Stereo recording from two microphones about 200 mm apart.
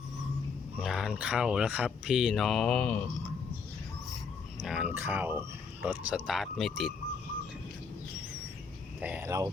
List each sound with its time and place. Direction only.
0.8 s speech: centre (ahead or behind)
4.6 s speech: 5° right (ahead or behind)
9.0 s speech: 5° right (ahead or behind)